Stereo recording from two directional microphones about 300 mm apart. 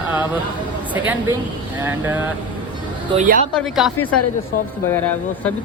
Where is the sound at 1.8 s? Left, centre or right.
Centre.